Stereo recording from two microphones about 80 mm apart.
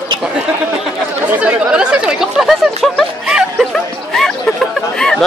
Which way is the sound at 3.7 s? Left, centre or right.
Centre.